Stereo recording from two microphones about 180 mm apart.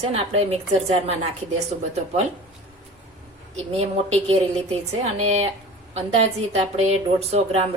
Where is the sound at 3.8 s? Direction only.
35° right (ahead or behind).